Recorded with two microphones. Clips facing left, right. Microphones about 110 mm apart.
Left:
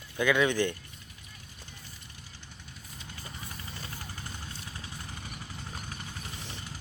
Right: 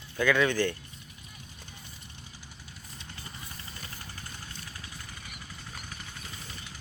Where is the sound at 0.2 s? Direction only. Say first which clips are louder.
Even; 15° left (ahead or behind).